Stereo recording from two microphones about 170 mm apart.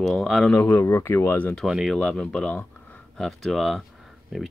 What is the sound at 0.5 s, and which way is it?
Speech, 15° left (ahead or behind).